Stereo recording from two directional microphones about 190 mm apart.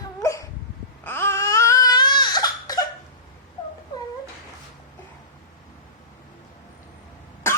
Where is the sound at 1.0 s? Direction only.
10° left (ahead or behind).